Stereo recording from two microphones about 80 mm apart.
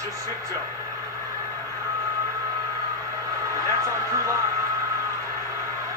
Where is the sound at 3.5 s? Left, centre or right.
Right.